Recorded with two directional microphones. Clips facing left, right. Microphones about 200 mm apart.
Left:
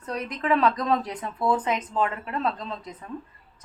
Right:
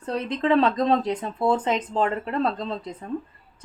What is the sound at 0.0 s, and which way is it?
Speech, 30° right (ahead or behind).